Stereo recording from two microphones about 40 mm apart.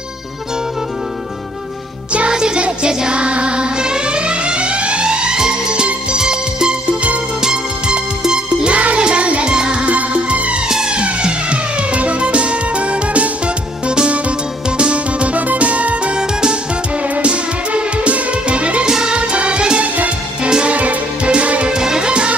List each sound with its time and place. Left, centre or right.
2.3 s music: centre
9.5 s music: right
9.8 s music: right
10.7 s music: centre; by 16.1 s right
16.1 s music: centre
17.0 s music: right
18.9 s music: centre
19.1 s music: right
20.7 s music: right
21.7 s music: centre